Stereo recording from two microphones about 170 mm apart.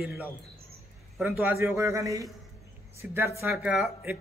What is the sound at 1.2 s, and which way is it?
A man's voice, 10° right (ahead or behind).